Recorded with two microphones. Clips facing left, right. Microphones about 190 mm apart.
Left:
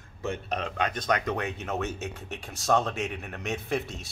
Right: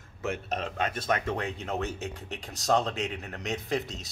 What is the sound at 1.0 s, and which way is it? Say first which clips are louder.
Speech: left 1 dB; 25° right (ahead or behind).